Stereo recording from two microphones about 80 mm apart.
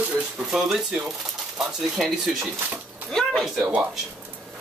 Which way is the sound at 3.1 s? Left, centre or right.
Centre.